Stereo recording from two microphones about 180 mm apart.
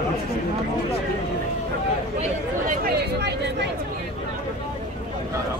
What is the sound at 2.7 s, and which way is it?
Speech, 60° right (ahead or behind).